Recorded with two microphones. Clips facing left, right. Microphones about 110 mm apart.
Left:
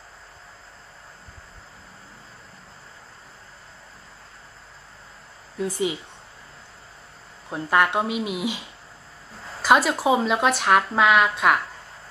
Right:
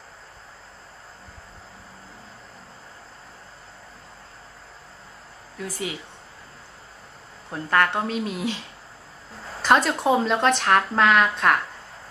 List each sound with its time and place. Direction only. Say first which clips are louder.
5.6 s speech: left 6 dB; 20° left (ahead or behind)
7.4 s speech: left 1 dB; 15° left (ahead or behind)